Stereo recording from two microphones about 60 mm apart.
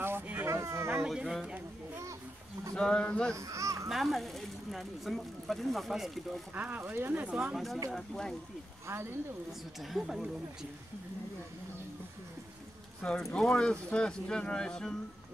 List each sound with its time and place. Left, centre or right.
0.0 s a sound: right
0.5 s a sound: right
0.9 s speech: centre
2.7 s speech: centre
3.3 s speech: right
3.9 s speech: centre
6.5 s speech: right
7.2 s speech: centre
7.5 s speech: centre
9.8 s speech: centre
13.0 s speech: centre